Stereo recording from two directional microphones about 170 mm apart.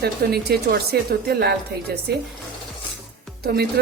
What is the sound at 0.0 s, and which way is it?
Speech, 70° right (ahead or behind).